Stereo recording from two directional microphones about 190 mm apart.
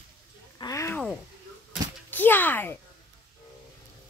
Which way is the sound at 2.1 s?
10° left (ahead or behind).